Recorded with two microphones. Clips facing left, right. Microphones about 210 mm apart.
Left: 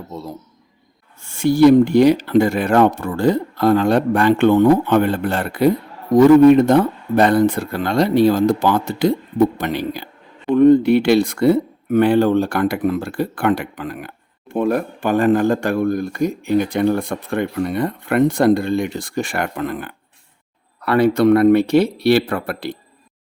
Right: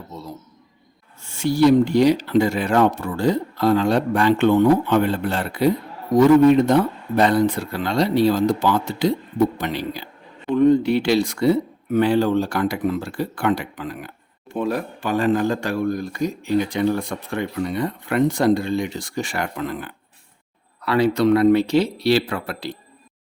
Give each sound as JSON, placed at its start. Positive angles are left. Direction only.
{"t": 1.2, "sound": "speech", "side_deg": 55}